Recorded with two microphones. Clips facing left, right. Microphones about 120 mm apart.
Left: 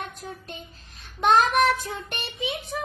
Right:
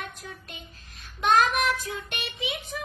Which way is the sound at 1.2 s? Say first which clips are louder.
Left 3 dB; 35° left (ahead or behind).